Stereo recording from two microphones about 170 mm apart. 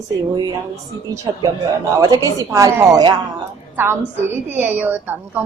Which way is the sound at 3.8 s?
15° right (ahead or behind).